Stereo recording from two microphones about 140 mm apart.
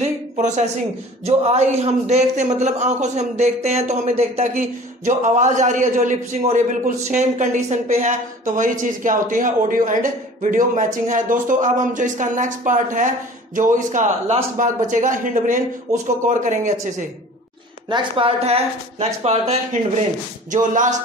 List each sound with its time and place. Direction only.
0.0 s a sound: 55° right (ahead or behind)
1.2 s a man's voice: 50° right (ahead or behind)
17.8 s speech: 35° right (ahead or behind)
20.5 s a man's voice: 65° right (ahead or behind)